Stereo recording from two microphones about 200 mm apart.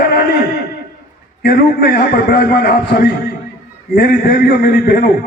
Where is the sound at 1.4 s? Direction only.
55° left (ahead or behind).